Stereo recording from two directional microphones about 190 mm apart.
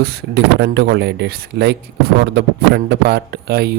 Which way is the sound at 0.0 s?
60° right (ahead or behind).